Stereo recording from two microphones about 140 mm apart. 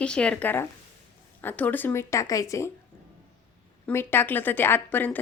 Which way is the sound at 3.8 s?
15° left (ahead or behind).